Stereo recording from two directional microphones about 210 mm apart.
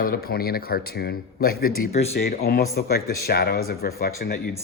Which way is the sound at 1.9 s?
30° left (ahead or behind).